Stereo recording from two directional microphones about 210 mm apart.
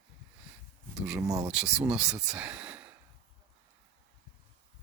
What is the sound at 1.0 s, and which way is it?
Speech, 10° right (ahead or behind).